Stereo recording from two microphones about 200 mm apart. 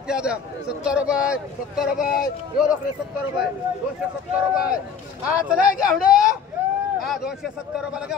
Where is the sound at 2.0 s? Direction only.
45° left (ahead or behind).